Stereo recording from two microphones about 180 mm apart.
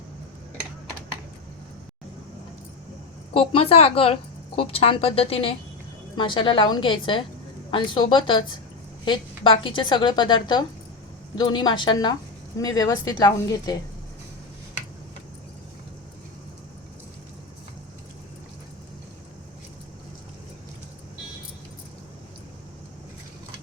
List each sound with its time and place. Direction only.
3.3 s a woman's voice: 30° left (ahead or behind)